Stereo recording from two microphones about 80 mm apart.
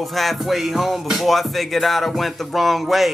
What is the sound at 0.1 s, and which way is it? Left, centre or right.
Music, centre.